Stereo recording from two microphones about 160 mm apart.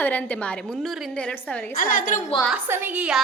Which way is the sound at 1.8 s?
55° left (ahead or behind).